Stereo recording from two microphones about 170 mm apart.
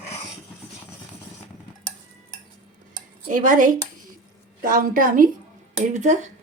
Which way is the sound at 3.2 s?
50° right (ahead or behind).